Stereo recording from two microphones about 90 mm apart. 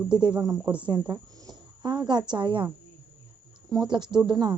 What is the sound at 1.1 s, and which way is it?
Speech, 55° right (ahead or behind).